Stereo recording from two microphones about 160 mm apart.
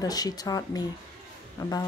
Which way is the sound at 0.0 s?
25° left (ahead or behind).